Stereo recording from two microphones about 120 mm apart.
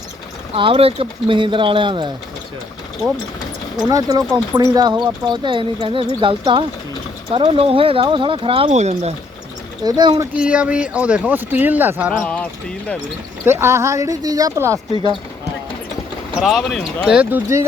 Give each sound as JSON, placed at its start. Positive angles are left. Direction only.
{"t": 0.5, "sound": "speech", "side_deg": -50}
{"t": 3.8, "sound": "speech", "side_deg": -30}
{"t": 8.7, "sound": "speech", "side_deg": -70}
{"t": 9.8, "sound": "speech", "side_deg": -35}
{"t": 10.3, "sound": "speech", "side_deg": -10}
{"t": 12.1, "sound": "speech", "side_deg": 10}
{"t": 13.4, "sound": "speech", "side_deg": -20}
{"t": 16.3, "sound": "speech", "side_deg": 0}
{"t": 17.1, "sound": "speech", "side_deg": -15}